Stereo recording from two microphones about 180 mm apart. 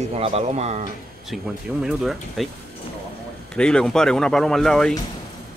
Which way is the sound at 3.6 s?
5° left (ahead or behind).